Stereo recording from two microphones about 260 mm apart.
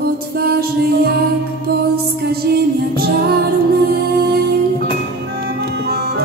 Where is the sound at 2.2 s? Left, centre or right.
Right.